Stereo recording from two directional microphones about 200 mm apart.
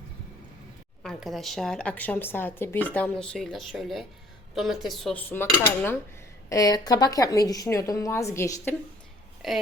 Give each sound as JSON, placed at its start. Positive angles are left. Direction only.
{"t": 1.0, "sound": "a woman's voice", "side_deg": 0}
{"t": 9.4, "sound": "a woman's voice", "side_deg": 0}